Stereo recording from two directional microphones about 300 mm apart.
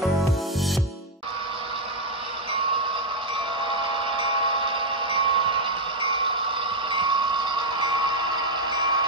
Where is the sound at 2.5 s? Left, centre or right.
Centre.